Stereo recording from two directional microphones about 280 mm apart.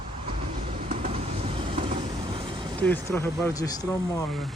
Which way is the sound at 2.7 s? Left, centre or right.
Centre.